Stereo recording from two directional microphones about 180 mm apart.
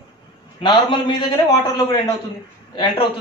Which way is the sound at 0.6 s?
25° left (ahead or behind).